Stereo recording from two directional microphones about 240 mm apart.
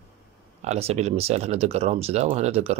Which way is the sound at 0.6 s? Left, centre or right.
Right.